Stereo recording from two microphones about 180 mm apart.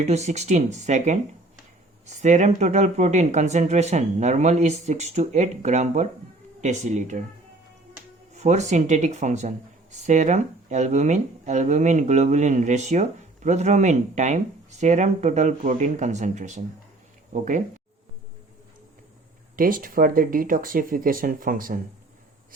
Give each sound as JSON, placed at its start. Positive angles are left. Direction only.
{"t": 0.0, "sound": "speech", "side_deg": -40}
{"t": 8.3, "sound": "speech", "side_deg": -40}
{"t": 19.5, "sound": "speech", "side_deg": -50}